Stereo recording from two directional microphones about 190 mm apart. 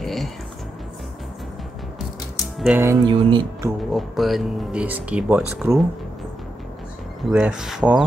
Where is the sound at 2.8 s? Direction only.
20° right (ahead or behind).